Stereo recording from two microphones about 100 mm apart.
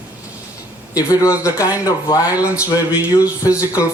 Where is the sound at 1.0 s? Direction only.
35° left (ahead or behind).